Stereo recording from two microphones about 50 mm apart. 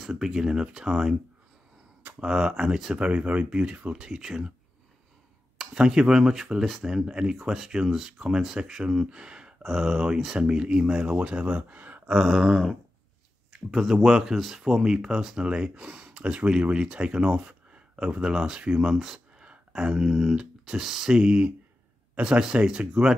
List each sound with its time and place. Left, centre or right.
0.1 s speech: centre
2.1 s speech: centre
3.0 s speech: right
3.4 s speech: centre
5.8 s speech: centre
9.9 s speech: centre
11.1 s speech: right
12.1 s a sound: centre
14.6 s speech: centre
18.9 s speech: centre